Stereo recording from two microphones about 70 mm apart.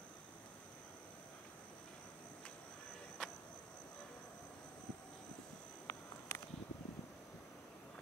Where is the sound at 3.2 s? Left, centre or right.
Centre.